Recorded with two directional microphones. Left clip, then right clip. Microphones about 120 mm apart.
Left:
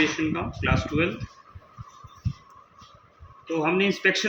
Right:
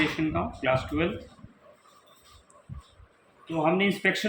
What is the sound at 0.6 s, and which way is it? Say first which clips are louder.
Speech: left 1 dB; 30° right (ahead or behind).